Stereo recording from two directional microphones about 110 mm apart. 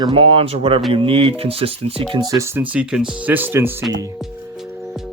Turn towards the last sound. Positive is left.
turn(degrees=-20)  # may be behind; listen again after turning